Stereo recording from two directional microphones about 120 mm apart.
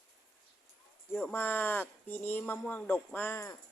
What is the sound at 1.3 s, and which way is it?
Speech, 15° left (ahead or behind).